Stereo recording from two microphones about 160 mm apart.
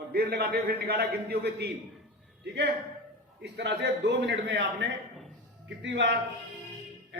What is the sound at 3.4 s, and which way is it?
A man's voice, 90° right.